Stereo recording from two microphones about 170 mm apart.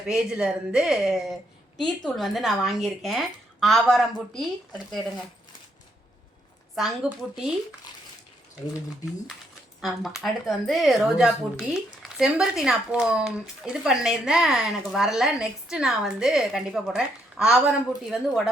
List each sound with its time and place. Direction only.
0.1 s speech: 5° right (ahead or behind)
6.7 s speech: centre (ahead or behind)
7.9 s bathtub: 25° left (ahead or behind)
9.8 s speech: centre (ahead or behind)